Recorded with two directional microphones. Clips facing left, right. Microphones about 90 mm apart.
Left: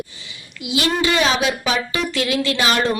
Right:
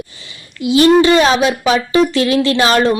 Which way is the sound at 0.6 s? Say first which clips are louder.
Right 11 dB; 40° right (ahead or behind).